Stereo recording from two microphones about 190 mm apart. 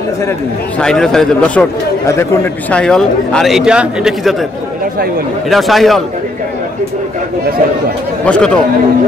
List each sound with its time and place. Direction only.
0.7 s a man's voice: 5° left (ahead or behind)
2.7 s a man's voice: 5° left (ahead or behind)
5.5 s a man's voice: centre (ahead or behind)
8.3 s speech: 5° left (ahead or behind)